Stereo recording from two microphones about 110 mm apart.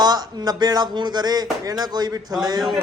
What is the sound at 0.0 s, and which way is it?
Speech, 40° right (ahead or behind).